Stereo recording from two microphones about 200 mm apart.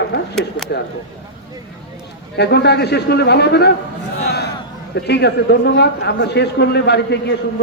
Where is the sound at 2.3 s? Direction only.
55° left (ahead or behind).